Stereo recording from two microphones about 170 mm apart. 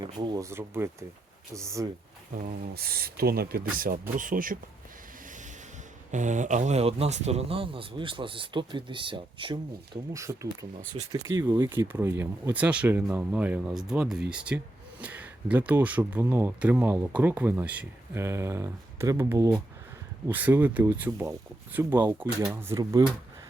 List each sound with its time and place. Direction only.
0.0 s speech: 25° right (ahead or behind)
2.7 s speech: 65° right (ahead or behind)
6.1 s speech: 45° right (ahead or behind); by 23.0 s 20° right (ahead or behind)